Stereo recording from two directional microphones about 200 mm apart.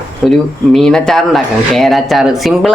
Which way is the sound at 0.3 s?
Centre (ahead or behind).